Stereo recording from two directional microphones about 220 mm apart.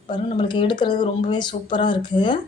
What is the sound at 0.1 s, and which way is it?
Speech, 20° left (ahead or behind).